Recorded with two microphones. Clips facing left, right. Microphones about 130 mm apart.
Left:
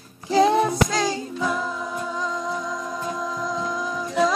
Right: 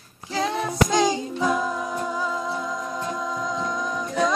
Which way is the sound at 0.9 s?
20° right (ahead or behind).